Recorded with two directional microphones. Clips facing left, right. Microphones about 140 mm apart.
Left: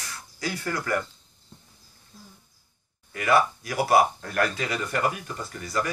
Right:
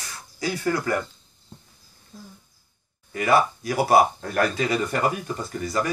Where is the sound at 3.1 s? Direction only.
25° right (ahead or behind).